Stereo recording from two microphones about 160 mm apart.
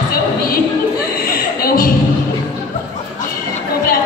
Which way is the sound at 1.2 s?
65° left (ahead or behind).